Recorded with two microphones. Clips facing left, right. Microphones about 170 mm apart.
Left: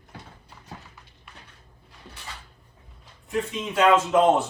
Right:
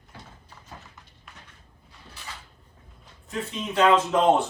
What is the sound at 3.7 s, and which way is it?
Speech, centre (ahead or behind).